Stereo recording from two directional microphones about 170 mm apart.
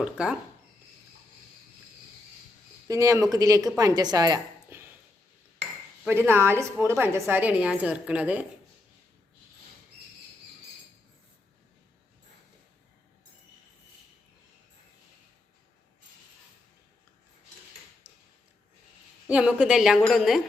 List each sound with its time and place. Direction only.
0.0 s a woman's voice: 5° right (ahead or behind)
2.8 s a woman's voice: 20° right (ahead or behind)
6.1 s a woman's voice: 15° right (ahead or behind)
18.0 s a sound: 10° right (ahead or behind)
19.3 s a woman's voice: 5° right (ahead or behind)